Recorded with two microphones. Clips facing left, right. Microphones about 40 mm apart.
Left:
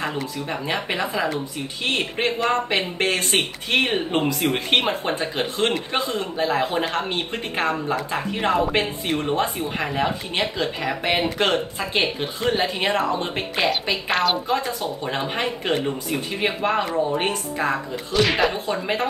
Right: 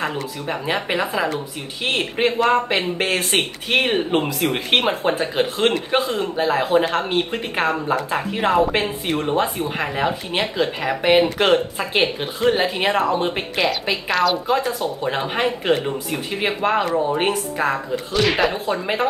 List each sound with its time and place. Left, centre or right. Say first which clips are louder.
0.0 s speech: right 2 dB; centre
14.1 s a woman's voice: right 2 dB; left
14.5 s speech: right 3 dB; centre
17.3 s speech: right 3 dB; centre